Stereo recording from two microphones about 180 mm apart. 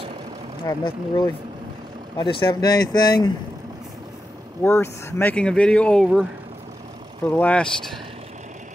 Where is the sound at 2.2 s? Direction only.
25° left (ahead or behind).